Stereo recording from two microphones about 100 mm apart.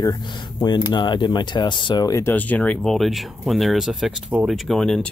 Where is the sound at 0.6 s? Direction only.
45° left (ahead or behind).